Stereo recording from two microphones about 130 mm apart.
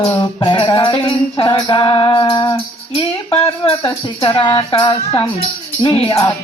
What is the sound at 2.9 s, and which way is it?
Speech, 50° left (ahead or behind).